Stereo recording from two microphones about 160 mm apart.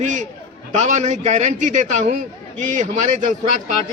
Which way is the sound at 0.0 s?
50° right (ahead or behind).